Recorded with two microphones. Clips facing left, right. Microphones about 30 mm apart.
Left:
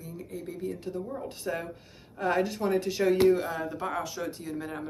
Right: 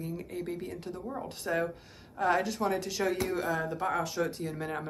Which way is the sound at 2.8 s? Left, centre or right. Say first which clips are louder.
Left 5 dB; centre.